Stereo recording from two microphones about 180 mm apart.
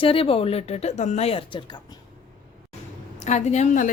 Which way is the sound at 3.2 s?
40° left (ahead or behind).